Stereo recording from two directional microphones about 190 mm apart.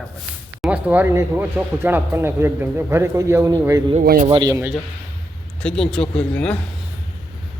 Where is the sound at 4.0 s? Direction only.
50° right (ahead or behind).